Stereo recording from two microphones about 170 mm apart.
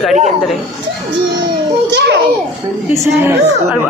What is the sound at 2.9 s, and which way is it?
Speech, 15° right (ahead or behind).